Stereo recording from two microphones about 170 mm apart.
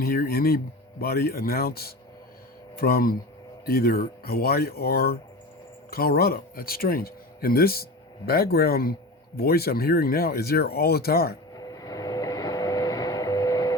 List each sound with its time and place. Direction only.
0.0 s speech: 60° left (ahead or behind)
11.5 s vehicle: 20° left (ahead or behind)